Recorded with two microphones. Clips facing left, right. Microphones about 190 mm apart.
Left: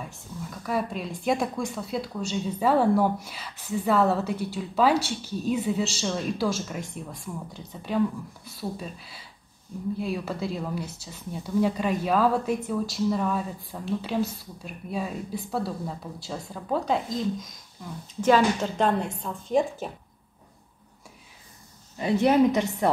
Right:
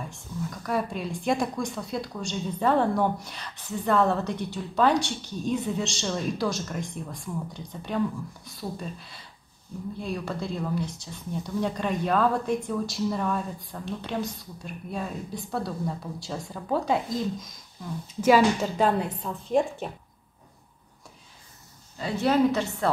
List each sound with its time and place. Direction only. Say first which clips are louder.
0.0 s a woman's voice: right 3 dB; 5° left (ahead or behind)
21.9 s a woman's voice: left 3 dB; 20° left (ahead or behind)